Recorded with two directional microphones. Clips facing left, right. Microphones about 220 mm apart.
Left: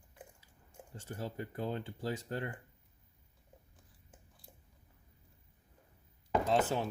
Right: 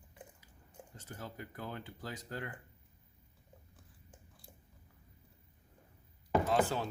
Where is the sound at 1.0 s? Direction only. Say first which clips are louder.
Left 6 dB; 30° left (ahead or behind).